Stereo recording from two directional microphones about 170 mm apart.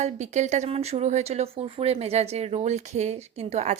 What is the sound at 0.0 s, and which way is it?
Speech, 45° right (ahead or behind).